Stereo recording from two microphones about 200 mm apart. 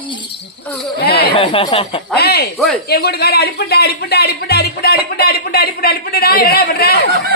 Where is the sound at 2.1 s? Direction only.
55° left (ahead or behind).